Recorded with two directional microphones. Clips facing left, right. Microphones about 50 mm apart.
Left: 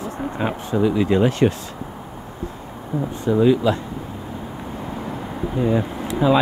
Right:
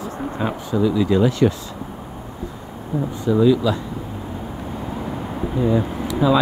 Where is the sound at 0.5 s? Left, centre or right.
Left.